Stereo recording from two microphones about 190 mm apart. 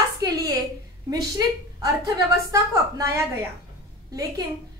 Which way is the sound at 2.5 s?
15° right (ahead or behind).